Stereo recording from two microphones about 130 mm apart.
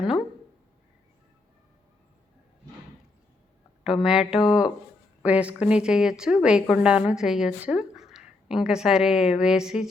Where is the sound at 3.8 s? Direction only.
5° right (ahead or behind).